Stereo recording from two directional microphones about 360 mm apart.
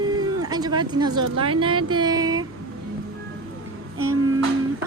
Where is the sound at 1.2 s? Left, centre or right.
Centre.